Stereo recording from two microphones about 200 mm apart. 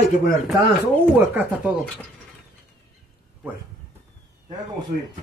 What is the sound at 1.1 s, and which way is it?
Speech, 10° right (ahead or behind).